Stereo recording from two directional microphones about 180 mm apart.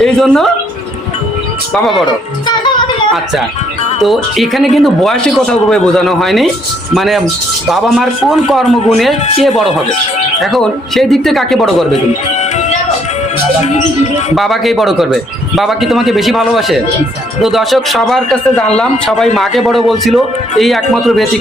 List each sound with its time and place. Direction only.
0.0 s speech: centre (ahead or behind)
1.7 s speech: centre (ahead or behind)
2.5 s music: 25° left (ahead or behind)
4.0 s speech: centre (ahead or behind)
14.3 s speech: centre (ahead or behind)